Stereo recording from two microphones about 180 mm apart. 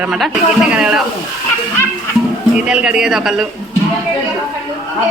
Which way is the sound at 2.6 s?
5° right (ahead or behind).